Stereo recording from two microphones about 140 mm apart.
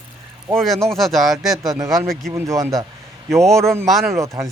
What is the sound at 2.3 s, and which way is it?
Speech, 20° right (ahead or behind).